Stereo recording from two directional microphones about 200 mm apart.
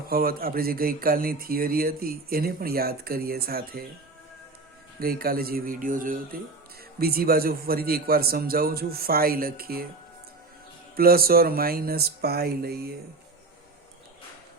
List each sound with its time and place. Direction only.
0.1 s speech: 50° right (ahead or behind)
4.9 s speech: 50° right (ahead or behind)
10.9 s speech: 50° right (ahead or behind)